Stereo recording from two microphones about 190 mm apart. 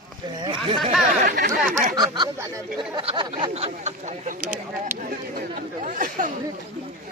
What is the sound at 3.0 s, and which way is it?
Speech, 30° right (ahead or behind).